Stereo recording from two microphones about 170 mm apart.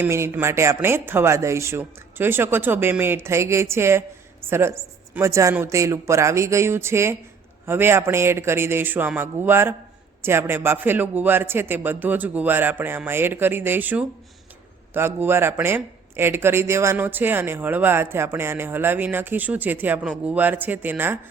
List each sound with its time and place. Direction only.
0.0 s speech: 15° right (ahead or behind)